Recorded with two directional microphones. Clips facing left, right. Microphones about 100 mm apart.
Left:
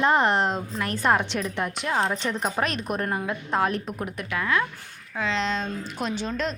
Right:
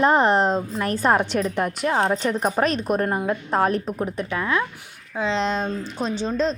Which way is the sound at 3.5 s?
40° right (ahead or behind).